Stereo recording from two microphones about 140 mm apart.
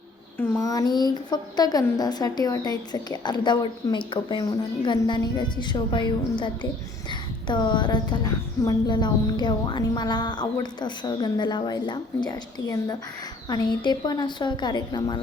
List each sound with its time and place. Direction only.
0.3 s a woman's voice: 20° left (ahead or behind)